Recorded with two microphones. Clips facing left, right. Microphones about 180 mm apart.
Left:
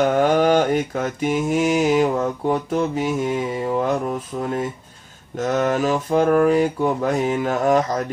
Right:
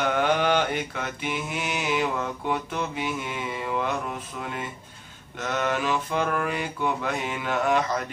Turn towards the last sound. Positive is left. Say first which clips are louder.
# left 6 dB
turn(degrees=40)  # may be behind; listen again after turning